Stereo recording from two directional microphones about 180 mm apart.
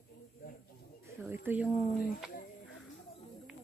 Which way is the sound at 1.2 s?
10° right (ahead or behind).